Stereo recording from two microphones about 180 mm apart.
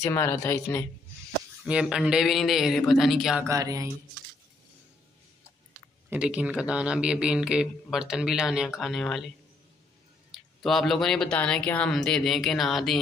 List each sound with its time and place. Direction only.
0.0 s speech: 15° left (ahead or behind)
1.7 s speech: 5° right (ahead or behind)
3.4 s speech: 20° right (ahead or behind)
6.0 s speech: 5° right (ahead or behind)
10.3 s speech: centre (ahead or behind)